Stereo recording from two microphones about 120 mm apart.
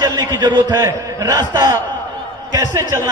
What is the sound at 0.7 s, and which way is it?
A man's voice, 25° right (ahead or behind).